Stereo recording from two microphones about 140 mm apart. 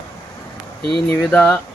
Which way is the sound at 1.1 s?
10° left (ahead or behind).